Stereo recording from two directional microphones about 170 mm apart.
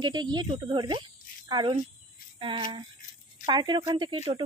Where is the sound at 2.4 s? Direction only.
30° right (ahead or behind).